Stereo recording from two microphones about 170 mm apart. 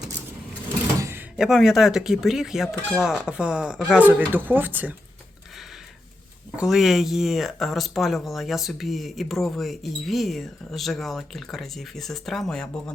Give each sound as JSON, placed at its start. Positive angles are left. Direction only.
{"t": 0.9, "sound": "door", "side_deg": -15}
{"t": 1.4, "sound": "speech", "side_deg": 0}
{"t": 6.6, "sound": "speech", "side_deg": 0}